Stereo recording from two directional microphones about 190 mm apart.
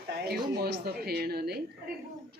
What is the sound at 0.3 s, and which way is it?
Speech, 55° right (ahead or behind).